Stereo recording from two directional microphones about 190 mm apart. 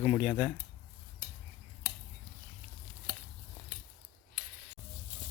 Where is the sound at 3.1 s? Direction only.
40° right (ahead or behind).